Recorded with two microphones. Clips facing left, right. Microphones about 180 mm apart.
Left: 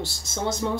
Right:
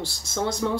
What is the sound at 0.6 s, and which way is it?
Speech, 25° left (ahead or behind).